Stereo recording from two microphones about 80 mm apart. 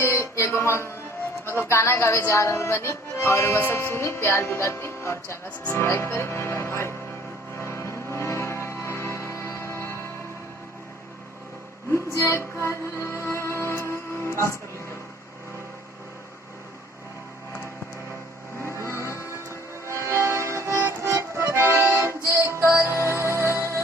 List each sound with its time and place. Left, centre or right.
0.0 s a sound: left
1.6 s music: left
12.1 s music: left
18.7 s music: right
19.3 s vehicle: right
21.3 s accordion: right
22.2 s music: right